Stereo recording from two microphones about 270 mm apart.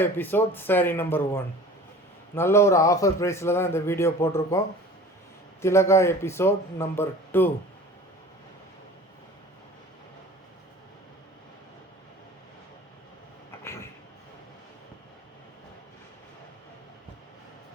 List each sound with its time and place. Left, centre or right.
0.0 s a man's voice: centre
5.6 s a man's voice: centre